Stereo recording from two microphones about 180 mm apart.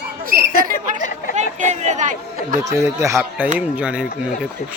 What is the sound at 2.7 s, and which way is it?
Speech, 15° right (ahead or behind).